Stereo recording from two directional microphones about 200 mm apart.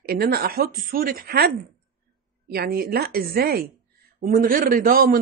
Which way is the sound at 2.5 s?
50° right (ahead or behind).